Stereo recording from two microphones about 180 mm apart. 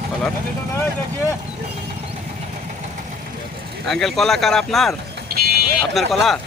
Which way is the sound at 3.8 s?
Centre (ahead or behind).